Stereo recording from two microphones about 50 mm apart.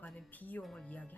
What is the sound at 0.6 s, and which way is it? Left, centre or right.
Speech, centre.